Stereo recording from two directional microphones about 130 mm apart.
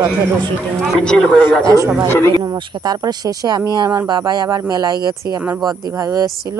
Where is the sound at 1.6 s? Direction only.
25° right (ahead or behind).